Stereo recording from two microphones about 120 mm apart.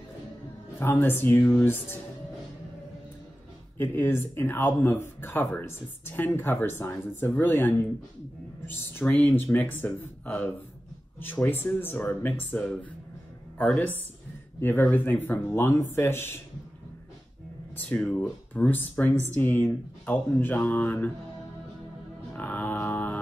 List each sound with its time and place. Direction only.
0.7 s speech: 15° left (ahead or behind)
3.7 s speech: 20° left (ahead or behind)
14.6 s speech: 20° left (ahead or behind)
17.7 s speech: 10° left (ahead or behind)
22.4 s a sound: 15° left (ahead or behind)